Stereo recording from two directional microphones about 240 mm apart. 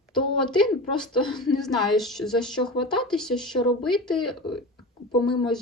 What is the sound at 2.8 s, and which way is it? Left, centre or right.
Speech, left.